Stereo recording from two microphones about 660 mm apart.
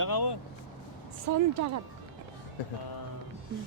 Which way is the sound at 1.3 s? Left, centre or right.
Right.